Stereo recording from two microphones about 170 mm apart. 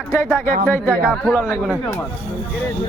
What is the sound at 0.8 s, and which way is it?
Speech, 5° right (ahead or behind).